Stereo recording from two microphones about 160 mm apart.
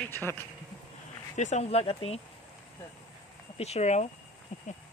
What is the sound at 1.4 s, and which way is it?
Speech, 45° left (ahead or behind).